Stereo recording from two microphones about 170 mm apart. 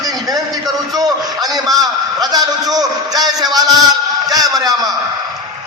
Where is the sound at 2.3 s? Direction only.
20° right (ahead or behind).